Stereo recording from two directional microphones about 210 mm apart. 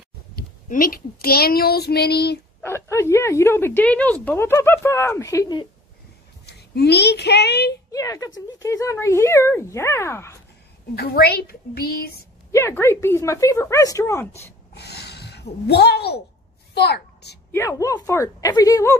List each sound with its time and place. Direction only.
0.4 s a child's voice: 40° left (ahead or behind)
2.6 s a woman's voice: 10° left (ahead or behind)
6.4 s a child's voice: 50° left (ahead or behind)
7.9 s a woman's voice: 15° left (ahead or behind)
11.0 s a child's voice: 50° left (ahead or behind)
12.5 s a woman's voice: 10° left (ahead or behind)
14.7 s a sound: 50° left (ahead or behind)
16.7 s a child's voice: 50° left (ahead or behind)
17.5 s a woman's voice: 15° left (ahead or behind)